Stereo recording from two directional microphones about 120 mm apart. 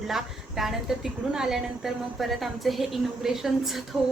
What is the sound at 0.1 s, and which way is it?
A woman's voice, centre (ahead or behind).